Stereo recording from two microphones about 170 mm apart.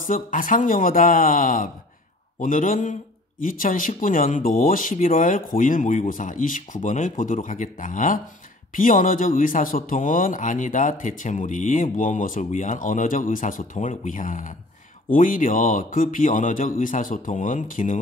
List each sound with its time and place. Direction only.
0.0 s a man's voice: 55° left (ahead or behind)